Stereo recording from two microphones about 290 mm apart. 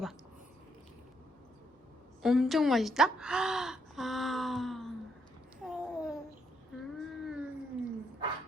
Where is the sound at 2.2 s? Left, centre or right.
Centre.